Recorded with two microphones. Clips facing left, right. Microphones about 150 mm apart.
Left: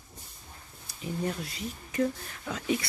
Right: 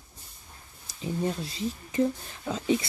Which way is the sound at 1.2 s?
30° right (ahead or behind).